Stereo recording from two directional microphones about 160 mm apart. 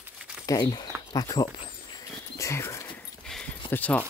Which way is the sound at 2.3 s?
20° left (ahead or behind).